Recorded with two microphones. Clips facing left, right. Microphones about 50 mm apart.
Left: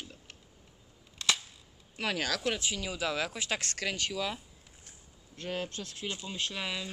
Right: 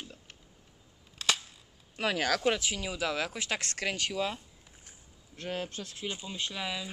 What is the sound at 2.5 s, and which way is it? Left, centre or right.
Speech, right.